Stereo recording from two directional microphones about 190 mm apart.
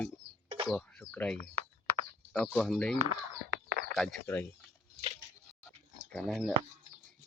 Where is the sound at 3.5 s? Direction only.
60° right (ahead or behind).